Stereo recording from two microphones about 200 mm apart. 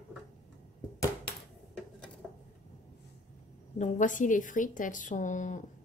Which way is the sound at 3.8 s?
40° left (ahead or behind).